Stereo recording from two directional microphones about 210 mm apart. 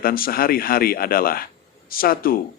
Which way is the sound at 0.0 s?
45° left (ahead or behind).